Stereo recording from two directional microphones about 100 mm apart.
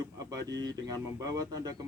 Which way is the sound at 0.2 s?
40° right (ahead or behind).